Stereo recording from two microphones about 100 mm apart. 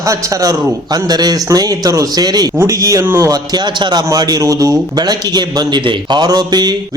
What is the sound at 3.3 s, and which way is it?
A man's voice, 45° right (ahead or behind).